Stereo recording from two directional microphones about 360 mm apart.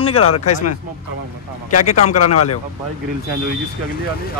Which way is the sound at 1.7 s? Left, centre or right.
Left.